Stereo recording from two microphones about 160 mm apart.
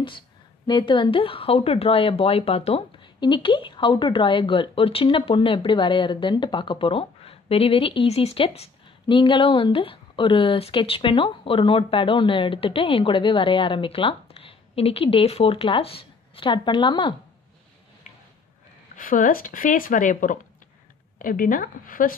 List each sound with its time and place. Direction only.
0.7 s speech: 30° left (ahead or behind)
18.9 s speech: 60° left (ahead or behind)